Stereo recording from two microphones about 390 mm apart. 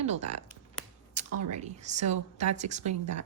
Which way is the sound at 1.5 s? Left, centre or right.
Centre.